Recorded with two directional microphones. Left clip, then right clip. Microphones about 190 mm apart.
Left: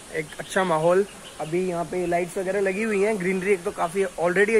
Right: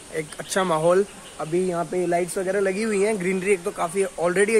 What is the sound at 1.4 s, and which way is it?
Speech, 25° right (ahead or behind).